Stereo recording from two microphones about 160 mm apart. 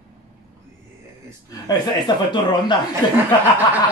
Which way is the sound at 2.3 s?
30° left (ahead or behind).